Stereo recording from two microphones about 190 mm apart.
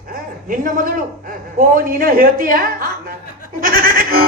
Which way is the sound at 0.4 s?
45° right (ahead or behind).